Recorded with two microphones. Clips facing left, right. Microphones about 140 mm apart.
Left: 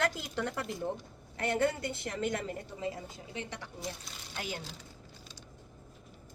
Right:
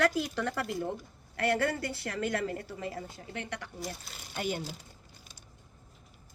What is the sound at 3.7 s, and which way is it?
Speech, 5° right (ahead or behind).